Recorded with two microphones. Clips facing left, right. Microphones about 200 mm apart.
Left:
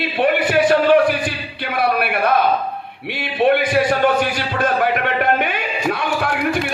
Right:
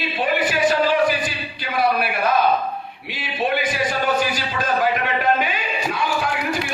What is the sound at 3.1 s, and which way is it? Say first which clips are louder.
A man's voice: left 7 dB; 60° left (ahead or behind).